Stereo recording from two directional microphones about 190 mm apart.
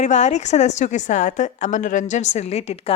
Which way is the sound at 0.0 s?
40° left (ahead or behind).